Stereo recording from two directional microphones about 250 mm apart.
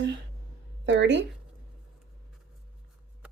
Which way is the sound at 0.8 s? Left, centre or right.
Right.